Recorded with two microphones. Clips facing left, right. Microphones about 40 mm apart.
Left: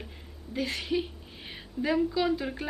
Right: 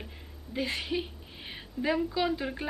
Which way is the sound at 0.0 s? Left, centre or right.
Centre.